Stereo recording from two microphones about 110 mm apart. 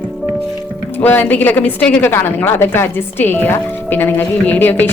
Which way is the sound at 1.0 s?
15° left (ahead or behind).